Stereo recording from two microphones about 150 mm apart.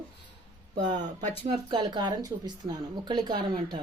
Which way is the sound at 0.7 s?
55° right (ahead or behind).